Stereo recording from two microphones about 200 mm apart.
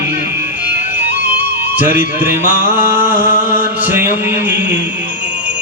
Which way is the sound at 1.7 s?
10° right (ahead or behind).